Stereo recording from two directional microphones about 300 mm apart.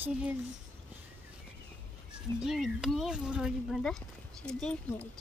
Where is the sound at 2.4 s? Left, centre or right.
Centre.